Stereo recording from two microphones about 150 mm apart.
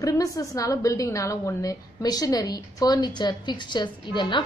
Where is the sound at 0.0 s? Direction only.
25° left (ahead or behind).